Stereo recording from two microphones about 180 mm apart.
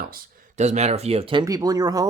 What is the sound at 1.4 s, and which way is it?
Speech, 20° right (ahead or behind).